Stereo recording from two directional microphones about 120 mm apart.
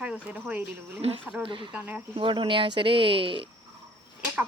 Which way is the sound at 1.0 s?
55° right (ahead or behind).